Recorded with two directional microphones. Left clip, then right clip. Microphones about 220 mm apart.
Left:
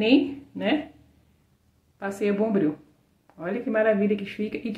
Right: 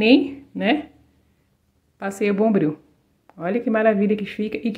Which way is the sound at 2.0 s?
35° right (ahead or behind).